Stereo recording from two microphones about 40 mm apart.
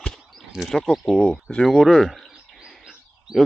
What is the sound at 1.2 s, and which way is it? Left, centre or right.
Speech, left.